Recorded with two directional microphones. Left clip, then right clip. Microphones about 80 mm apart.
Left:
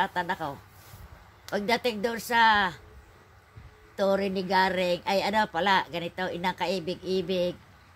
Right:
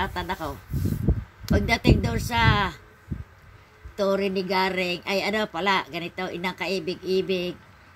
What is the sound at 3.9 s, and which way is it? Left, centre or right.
Speech, left.